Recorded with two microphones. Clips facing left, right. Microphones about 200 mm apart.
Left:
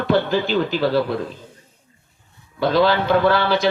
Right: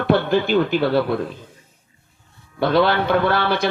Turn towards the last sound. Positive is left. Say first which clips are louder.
# left 2 dB
turn(degrees=-55)  # may be behind; listen again after turning